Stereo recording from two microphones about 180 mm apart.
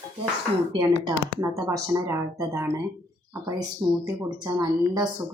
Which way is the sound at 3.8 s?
15° right (ahead or behind).